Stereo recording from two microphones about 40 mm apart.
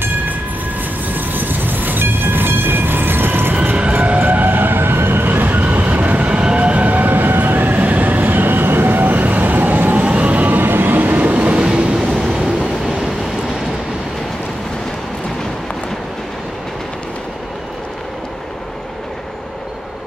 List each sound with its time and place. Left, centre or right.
1.1 s train: right
3.9 s vehicle: right
4.3 s train: right
6.3 s train: right
10.0 s vehicle: right
10.6 s train: right
11.1 s train: right
11.5 s train: right
12.2 s train: centre